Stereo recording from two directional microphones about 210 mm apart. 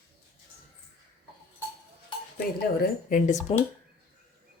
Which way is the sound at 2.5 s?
45° left (ahead or behind).